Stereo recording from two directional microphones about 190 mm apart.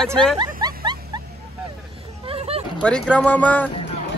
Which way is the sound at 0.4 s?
20° right (ahead or behind).